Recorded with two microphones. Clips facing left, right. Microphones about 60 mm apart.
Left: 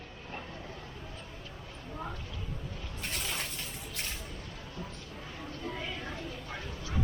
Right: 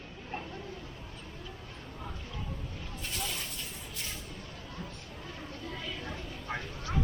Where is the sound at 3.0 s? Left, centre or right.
Left.